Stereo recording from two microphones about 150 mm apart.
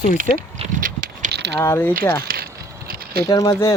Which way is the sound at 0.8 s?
65° right (ahead or behind).